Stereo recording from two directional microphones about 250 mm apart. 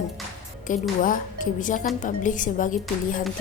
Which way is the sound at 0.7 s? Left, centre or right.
Left.